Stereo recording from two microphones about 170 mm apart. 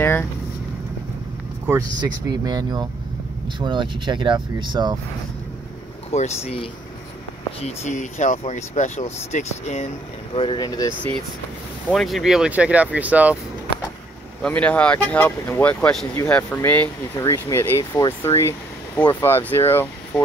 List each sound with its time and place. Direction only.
0.0 s vehicle: 10° left (ahead or behind)
1.7 s speech: 20° right (ahead or behind)
6.1 s speech: 40° left (ahead or behind)
10.3 s speech: 30° left (ahead or behind)
11.9 s speech: centre (ahead or behind)
14.4 s speech: 5° left (ahead or behind)